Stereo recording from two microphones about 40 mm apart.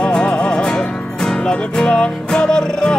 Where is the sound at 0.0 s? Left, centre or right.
Left.